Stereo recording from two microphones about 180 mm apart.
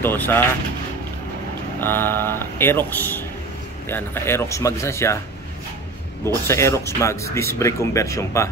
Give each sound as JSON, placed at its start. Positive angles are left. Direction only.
{"t": 0.0, "sound": "speech", "side_deg": 10}
{"t": 1.8, "sound": "speech", "side_deg": 10}
{"t": 6.2, "sound": "speech", "side_deg": 15}